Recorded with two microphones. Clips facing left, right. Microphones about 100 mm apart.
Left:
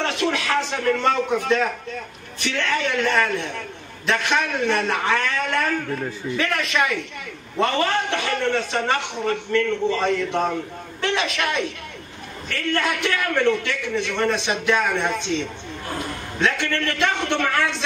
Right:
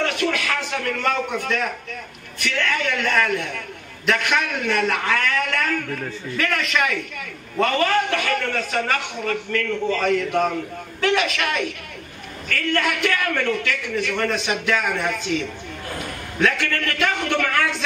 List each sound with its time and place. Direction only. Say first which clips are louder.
0.0 s a man's voice: even; 30° left (ahead or behind)